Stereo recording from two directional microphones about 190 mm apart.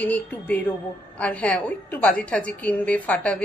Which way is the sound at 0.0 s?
10° left (ahead or behind).